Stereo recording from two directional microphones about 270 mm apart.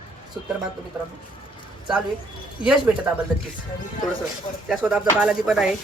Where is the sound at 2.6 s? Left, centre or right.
Centre.